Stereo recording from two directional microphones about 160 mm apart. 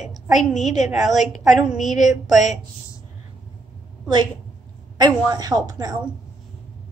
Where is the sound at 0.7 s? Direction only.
45° left (ahead or behind).